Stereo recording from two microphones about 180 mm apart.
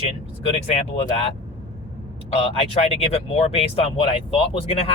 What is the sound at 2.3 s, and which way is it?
Speech, 35° left (ahead or behind).